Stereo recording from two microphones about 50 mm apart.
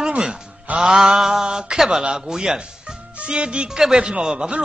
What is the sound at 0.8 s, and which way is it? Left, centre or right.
Speech, centre.